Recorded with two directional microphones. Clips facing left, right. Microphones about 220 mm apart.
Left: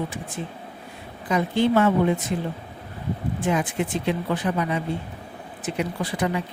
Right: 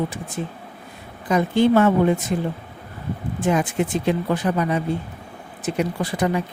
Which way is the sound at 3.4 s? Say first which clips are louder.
Right 4 dB; 45° right (ahead or behind).